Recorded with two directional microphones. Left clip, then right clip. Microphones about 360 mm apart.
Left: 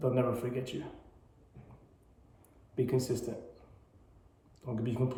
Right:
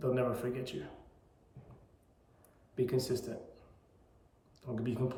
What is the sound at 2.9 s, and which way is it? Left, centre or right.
Speech, centre.